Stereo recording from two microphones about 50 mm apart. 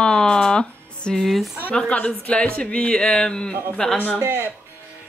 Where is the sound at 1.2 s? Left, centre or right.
Centre.